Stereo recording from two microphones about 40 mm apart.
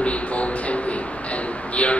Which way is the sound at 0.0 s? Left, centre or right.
Left.